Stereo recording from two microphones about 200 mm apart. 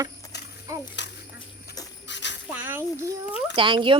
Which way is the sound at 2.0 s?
60° left (ahead or behind).